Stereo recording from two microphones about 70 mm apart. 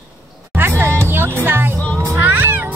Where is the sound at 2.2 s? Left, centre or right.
Right.